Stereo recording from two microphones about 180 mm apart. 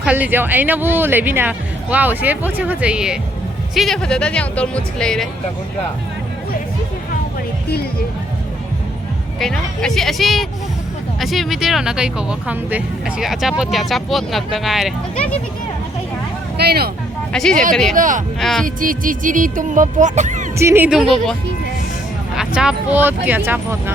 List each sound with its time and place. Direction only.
0.0 s speech: 10° right (ahead or behind)
9.4 s speech: 5° left (ahead or behind)
16.6 s speech: 60° right (ahead or behind)
17.3 s speech: 5° left (ahead or behind)
17.9 s speech: 45° right (ahead or behind)
18.3 s speech: centre (ahead or behind)
18.6 s speech: 50° right (ahead or behind)
20.6 s speech: 15° right (ahead or behind)
22.4 s speech: 5° right (ahead or behind)